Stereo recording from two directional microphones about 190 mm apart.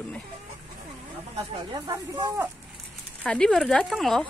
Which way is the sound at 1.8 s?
20° right (ahead or behind).